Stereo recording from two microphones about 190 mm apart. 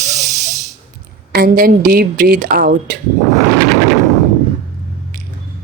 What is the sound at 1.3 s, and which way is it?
A woman's voice, 50° right (ahead or behind).